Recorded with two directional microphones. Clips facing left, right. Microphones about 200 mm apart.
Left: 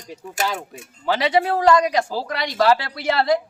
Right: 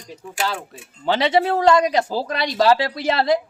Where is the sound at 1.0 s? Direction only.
25° right (ahead or behind).